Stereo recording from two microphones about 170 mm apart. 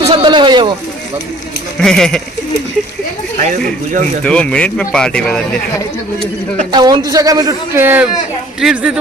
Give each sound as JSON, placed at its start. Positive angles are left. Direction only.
{"t": 0.0, "sound": "sheep", "side_deg": -30}
{"t": 1.8, "sound": "speech", "side_deg": 5}
{"t": 4.2, "sound": "speech", "side_deg": 5}
{"t": 6.7, "sound": "a man's voice", "side_deg": -25}